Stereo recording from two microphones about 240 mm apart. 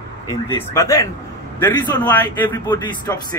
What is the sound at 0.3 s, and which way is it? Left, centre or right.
A man's voice, centre.